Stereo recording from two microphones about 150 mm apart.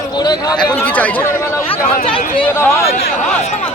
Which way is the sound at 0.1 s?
30° left (ahead or behind).